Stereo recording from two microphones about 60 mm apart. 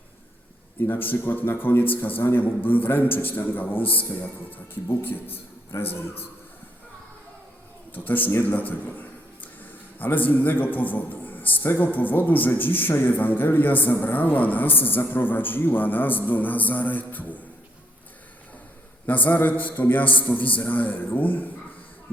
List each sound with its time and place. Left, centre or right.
0.8 s a man's voice: left
5.7 s a man's voice: left
7.9 s a man's voice: left
19.0 s a man's voice: left